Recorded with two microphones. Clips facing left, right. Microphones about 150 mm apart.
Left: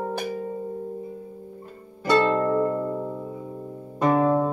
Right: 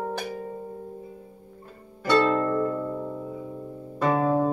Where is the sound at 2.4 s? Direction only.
15° left (ahead or behind).